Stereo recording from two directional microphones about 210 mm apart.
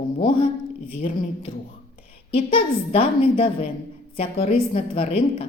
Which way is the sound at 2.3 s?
25° left (ahead or behind).